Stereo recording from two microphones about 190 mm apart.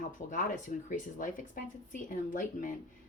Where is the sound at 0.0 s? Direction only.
45° left (ahead or behind).